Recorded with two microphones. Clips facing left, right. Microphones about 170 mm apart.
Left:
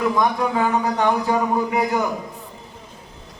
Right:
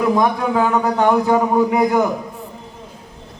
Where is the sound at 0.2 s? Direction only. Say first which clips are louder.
Right 3 dB; 60° right (ahead or behind).